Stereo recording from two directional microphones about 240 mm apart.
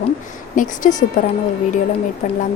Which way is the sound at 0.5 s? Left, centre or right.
Left.